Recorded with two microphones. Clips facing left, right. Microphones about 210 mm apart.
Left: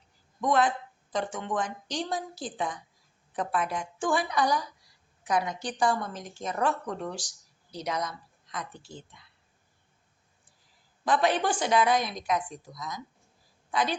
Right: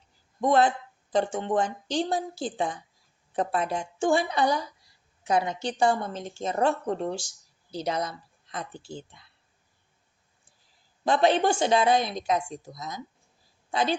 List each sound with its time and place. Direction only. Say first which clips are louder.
0.4 s a woman's voice: right 3 dB; 30° right (ahead or behind)
11.0 s a woman's voice: right 4 dB; 25° right (ahead or behind)